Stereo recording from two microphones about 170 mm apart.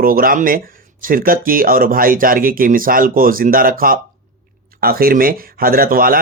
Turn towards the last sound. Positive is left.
turn(degrees=-60)  # may be behind; listen again after turning